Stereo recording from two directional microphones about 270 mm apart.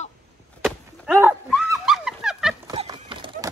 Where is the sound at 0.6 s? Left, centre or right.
Centre.